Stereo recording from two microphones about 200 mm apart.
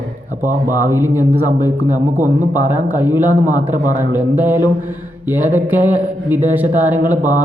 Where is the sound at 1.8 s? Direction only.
40° right (ahead or behind).